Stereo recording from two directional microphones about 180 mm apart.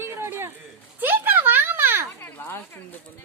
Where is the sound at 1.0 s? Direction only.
10° right (ahead or behind).